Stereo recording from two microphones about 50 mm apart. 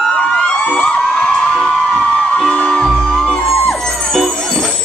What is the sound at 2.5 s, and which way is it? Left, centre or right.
Music, centre.